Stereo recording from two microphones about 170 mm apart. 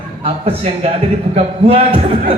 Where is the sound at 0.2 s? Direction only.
35° right (ahead or behind).